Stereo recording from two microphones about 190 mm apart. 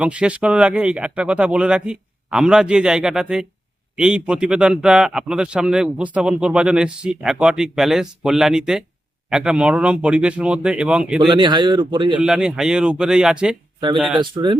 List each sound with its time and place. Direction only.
0.0 s a man's voice: 5° right (ahead or behind)
11.3 s a man's voice: 25° right (ahead or behind)
12.2 s a man's voice: 5° right (ahead or behind)
14.2 s a man's voice: 25° right (ahead or behind)